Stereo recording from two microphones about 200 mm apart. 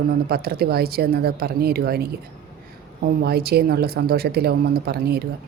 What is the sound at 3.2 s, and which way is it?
Speech, 50° right (ahead or behind).